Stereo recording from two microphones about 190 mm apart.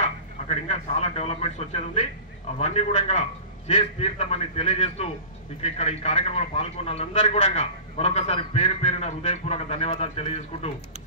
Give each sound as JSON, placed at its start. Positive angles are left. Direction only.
{"t": 0.5, "sound": "a man's voice", "side_deg": 35}